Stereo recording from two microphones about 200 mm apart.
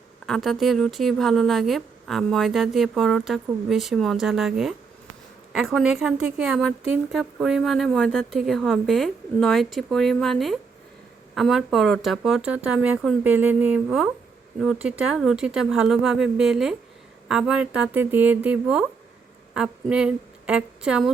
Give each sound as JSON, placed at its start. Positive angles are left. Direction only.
{"t": 0.3, "sound": "a woman's voice", "side_deg": 0}